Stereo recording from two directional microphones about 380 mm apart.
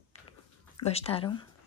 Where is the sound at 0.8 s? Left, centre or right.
Centre.